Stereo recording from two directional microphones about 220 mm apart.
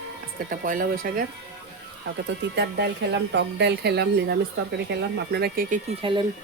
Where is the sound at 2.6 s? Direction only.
50° right (ahead or behind).